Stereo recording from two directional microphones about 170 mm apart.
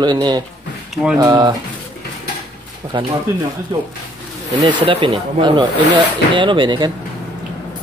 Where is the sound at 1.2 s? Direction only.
20° right (ahead or behind).